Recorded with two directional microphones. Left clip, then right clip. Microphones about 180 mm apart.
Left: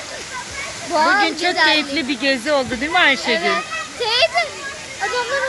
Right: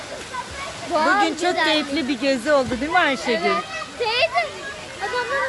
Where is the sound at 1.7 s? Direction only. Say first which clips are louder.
Left 3 dB; 10° right (ahead or behind).